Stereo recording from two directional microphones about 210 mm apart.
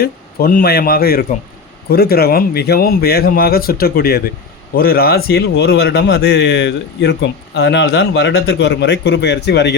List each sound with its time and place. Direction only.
0.0 s a man's voice: 45° left (ahead or behind)